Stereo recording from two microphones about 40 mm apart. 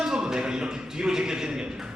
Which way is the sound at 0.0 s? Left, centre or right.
Centre.